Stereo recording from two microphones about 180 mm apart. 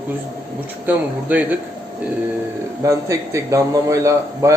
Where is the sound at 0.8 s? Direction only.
10° right (ahead or behind).